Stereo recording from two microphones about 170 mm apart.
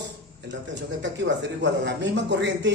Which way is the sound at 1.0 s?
90° right.